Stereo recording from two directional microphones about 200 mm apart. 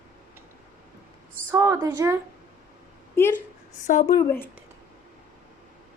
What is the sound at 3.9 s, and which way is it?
Speech, 40° left (ahead or behind).